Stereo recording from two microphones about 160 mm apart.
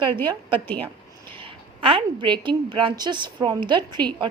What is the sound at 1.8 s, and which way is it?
Speech, 30° right (ahead or behind).